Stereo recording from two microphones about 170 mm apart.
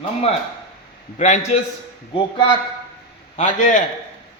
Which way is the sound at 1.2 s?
45° left (ahead or behind).